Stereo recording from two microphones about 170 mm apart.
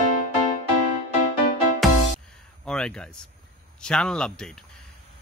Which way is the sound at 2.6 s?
5° left (ahead or behind).